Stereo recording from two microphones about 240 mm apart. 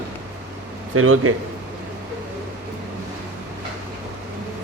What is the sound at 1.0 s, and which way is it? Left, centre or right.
Speech, right.